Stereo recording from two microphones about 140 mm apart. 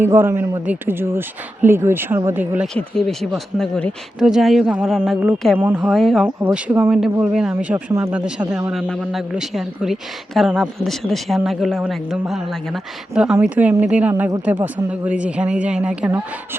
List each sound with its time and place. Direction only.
0.0 s speech: 15° right (ahead or behind)
2.7 s speech: 5° left (ahead or behind)
6.4 s speech: 10° right (ahead or behind)
14.1 s speech: 20° right (ahead or behind)
14.4 s speech: 10° right (ahead or behind)